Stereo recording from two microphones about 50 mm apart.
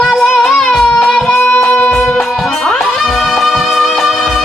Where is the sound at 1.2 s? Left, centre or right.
Left.